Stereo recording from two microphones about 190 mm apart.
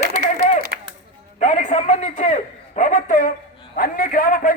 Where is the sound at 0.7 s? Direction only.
65° right (ahead or behind).